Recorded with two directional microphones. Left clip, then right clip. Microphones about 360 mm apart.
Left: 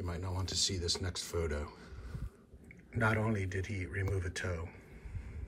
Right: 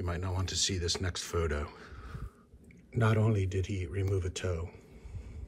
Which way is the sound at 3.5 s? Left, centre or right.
Centre.